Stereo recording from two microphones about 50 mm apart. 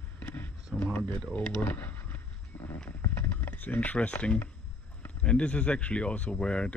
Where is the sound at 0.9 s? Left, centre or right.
Left.